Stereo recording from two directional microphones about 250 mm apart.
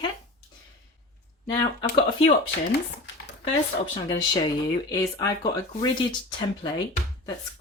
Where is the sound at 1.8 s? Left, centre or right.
Centre.